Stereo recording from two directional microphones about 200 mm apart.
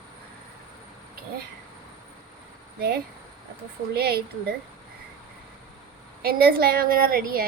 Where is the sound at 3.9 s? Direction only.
50° right (ahead or behind).